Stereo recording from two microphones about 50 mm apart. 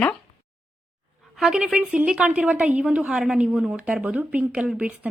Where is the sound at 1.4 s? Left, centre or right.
Centre; by 3.0 s right.